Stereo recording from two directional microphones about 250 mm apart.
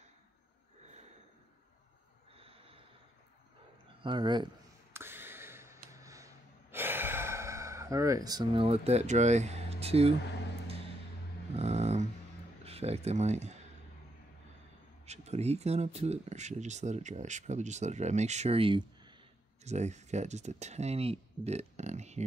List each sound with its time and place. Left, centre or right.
2.3 s snort: right
4.0 s speech: centre
4.9 s a sound: centre
11.5 s dog: right
12.6 s speech: right
15.0 s speech: right